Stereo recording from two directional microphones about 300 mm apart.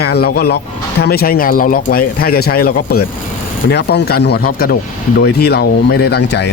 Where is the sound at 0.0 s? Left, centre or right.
Left.